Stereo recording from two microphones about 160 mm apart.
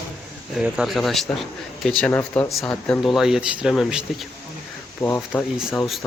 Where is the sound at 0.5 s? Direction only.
5° right (ahead or behind).